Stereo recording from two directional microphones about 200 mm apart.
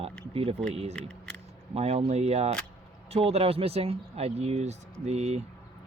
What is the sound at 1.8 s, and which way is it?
Speech, 30° right (ahead or behind).